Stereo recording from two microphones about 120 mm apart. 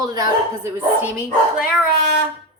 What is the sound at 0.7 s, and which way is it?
Speech, 15° right (ahead or behind).